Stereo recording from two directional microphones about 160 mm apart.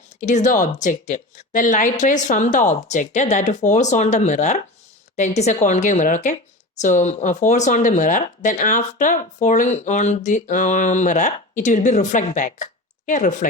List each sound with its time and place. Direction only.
0.2 s speech: 50° left (ahead or behind)